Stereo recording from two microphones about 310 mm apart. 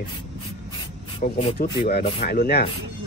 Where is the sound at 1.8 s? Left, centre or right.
Left.